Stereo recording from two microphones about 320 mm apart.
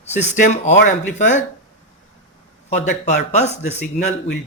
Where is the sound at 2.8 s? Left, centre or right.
Left.